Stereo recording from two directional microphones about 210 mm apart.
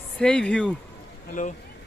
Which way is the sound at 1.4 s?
40° left (ahead or behind).